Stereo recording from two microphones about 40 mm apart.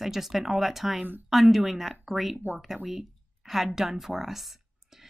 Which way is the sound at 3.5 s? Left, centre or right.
Centre.